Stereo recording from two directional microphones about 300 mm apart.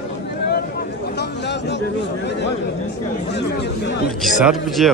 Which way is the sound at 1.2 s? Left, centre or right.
Left.